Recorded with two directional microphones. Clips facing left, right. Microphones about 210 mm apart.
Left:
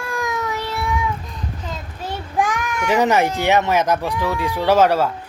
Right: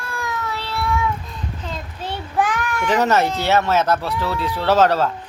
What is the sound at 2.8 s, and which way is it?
Speech, 10° left (ahead or behind).